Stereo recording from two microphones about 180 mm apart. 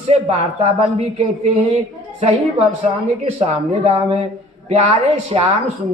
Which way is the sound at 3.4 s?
35° right (ahead or behind).